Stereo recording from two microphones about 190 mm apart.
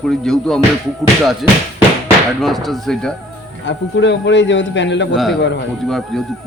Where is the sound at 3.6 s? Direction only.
70° left (ahead or behind).